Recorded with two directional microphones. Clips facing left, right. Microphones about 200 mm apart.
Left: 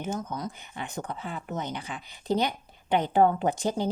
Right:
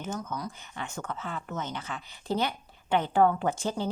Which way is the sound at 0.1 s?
20° left (ahead or behind).